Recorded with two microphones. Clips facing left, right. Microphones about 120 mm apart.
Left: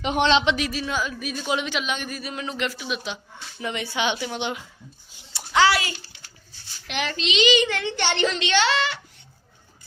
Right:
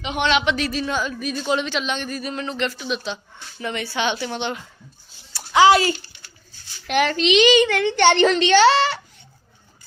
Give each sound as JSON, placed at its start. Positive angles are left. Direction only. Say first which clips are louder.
{"t": 0.0, "sound": "speech", "louder": "left 2 dB", "side_deg": 45}
{"t": 0.3, "sound": "speech", "louder": "right 1 dB", "side_deg": 30}
{"t": 0.5, "sound": "speech", "louder": "right 3 dB", "side_deg": 10}
{"t": 5.5, "sound": "a child's voice", "louder": "right 6 dB", "side_deg": -20}
{"t": 6.8, "sound": "a woman's voice", "louder": "right 9 dB", "side_deg": -50}
{"t": 8.4, "sound": "a woman's voice", "louder": "right 8 dB", "side_deg": -40}